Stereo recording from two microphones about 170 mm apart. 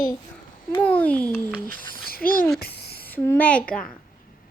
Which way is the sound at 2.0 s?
60° left (ahead or behind).